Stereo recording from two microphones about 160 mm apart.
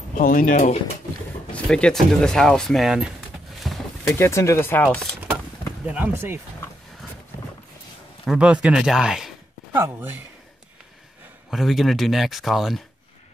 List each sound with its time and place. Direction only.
0.2 s speech: 60° left (ahead or behind)
1.5 s speech: 5° left (ahead or behind)
3.5 s a sound: centre (ahead or behind)
4.1 s speech: 20° left (ahead or behind)
5.9 s speech: 10° right (ahead or behind)
8.3 s speech: 5° right (ahead or behind)
11.5 s speech: centre (ahead or behind)